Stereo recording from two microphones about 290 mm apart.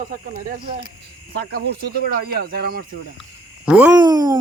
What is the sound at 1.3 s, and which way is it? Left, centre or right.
Speech, right.